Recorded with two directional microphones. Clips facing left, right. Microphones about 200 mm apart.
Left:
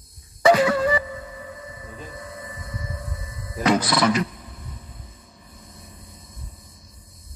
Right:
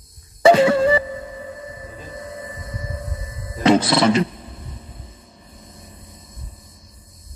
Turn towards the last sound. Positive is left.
turn(degrees=-30)  # may be behind; listen again after turning